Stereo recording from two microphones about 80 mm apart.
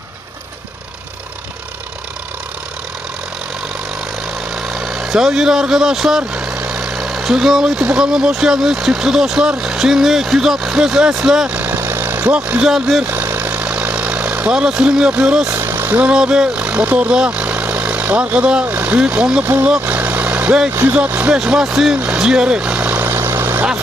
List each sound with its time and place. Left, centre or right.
4.5 s speech: centre
11.6 s vehicle: right; by 13.1 s centre
13.1 s vehicle: right
15.4 s speech: right
19.8 s vehicle: right
20.9 s speech: centre
21.9 s vehicle: centre